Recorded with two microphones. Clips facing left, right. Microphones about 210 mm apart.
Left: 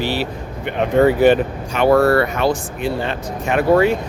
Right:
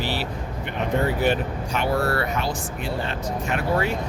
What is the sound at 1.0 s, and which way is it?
Speech, 80° left.